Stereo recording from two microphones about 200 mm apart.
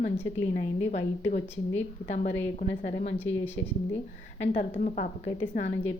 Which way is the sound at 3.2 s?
10° left (ahead or behind).